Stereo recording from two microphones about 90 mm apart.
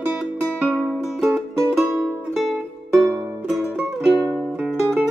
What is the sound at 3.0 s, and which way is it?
Music, 25° right (ahead or behind).